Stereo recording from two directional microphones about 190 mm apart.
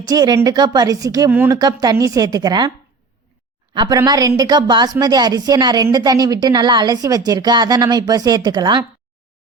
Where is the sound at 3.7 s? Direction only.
20° right (ahead or behind).